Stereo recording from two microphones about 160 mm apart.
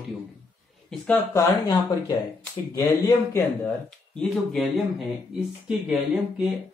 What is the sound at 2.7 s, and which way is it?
Speech, 20° left (ahead or behind).